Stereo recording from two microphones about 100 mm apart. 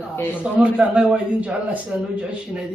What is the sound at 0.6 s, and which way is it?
A man's voice, 10° right (ahead or behind).